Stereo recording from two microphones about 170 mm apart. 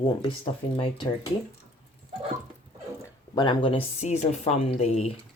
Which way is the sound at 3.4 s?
30° left (ahead or behind).